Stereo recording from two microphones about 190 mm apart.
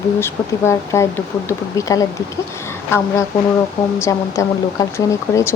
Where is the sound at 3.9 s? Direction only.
15° left (ahead or behind).